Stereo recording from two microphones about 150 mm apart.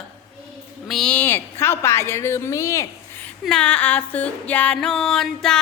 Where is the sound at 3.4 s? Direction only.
5° left (ahead or behind).